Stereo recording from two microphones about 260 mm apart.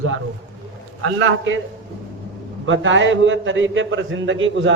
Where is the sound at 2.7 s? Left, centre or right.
Right.